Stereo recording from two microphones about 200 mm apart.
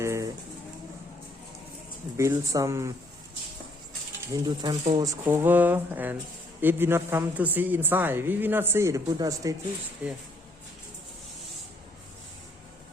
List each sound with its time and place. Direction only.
0.0 s pigeon: 15° right (ahead or behind)
2.1 s a woman's voice: 15° right (ahead or behind)
4.4 s a woman's voice: 20° right (ahead or behind)
10.0 s speech: 5° right (ahead or behind)